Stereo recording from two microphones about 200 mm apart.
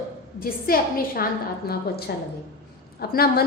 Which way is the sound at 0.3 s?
45° left (ahead or behind).